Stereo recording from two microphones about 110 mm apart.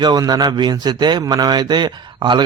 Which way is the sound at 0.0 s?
35° right (ahead or behind).